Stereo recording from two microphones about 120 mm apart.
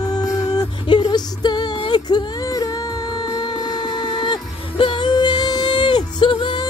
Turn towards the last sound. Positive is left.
turn(degrees=45)  # may be behind; listen again after turning